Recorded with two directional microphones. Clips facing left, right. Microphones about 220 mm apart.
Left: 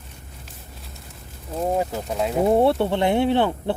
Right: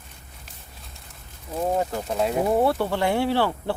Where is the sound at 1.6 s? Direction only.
5° left (ahead or behind).